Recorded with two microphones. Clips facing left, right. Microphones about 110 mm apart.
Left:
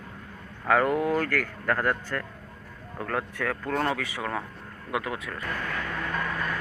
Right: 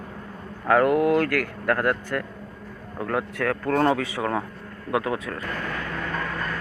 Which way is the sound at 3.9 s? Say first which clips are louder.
Right 6 dB; 20° right (ahead or behind).